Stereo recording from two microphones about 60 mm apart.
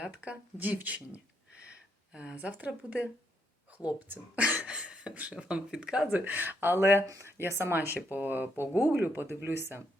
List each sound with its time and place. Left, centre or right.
0.0 s speech: right
4.4 s a sound: centre
5.1 s speech: right
6.1 s speech: right
6.7 s speech: right